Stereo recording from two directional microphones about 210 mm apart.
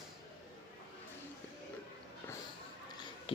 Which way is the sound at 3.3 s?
25° left (ahead or behind).